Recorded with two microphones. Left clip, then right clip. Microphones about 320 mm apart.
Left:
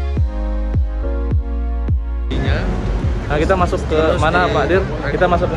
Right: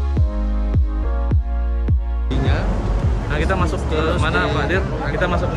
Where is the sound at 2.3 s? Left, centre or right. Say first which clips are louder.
Left 1 dB; centre.